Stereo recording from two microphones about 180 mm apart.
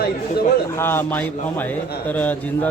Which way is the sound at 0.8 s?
10° left (ahead or behind).